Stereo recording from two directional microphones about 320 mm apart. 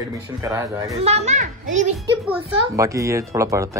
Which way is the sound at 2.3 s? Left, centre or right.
Centre.